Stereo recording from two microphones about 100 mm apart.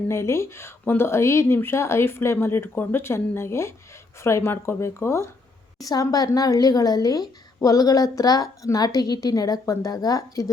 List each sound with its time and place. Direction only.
0.1 s speech: 25° left (ahead or behind)
5.8 s a woman's voice: 40° left (ahead or behind)